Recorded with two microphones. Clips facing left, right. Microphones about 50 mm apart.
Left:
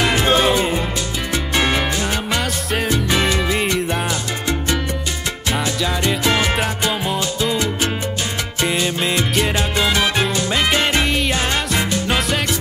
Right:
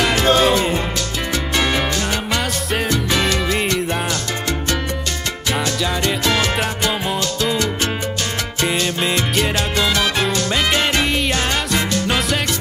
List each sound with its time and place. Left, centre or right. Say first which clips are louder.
0.0 s music: right 1 dB; centre
2.2 s music: even; centre
2.9 s music: left 1 dB; centre
6.0 s music: left 1 dB; centre
8.6 s music: even; centre
9.6 s music: even; centre
10.5 s music: left 2 dB; centre